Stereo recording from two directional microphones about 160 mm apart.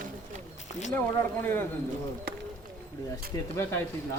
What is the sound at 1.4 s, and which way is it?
Speech, 15° left (ahead or behind).